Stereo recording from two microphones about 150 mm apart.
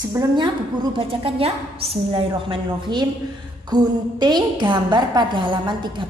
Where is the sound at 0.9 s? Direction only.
40° right (ahead or behind).